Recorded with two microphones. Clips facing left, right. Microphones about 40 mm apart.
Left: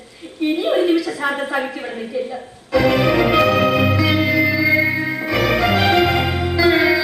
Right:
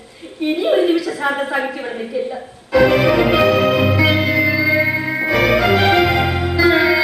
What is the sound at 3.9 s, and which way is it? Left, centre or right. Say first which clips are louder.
Music: right 2 dB; centre.